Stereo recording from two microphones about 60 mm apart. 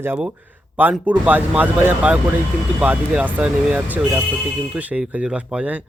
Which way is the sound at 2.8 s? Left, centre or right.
Centre.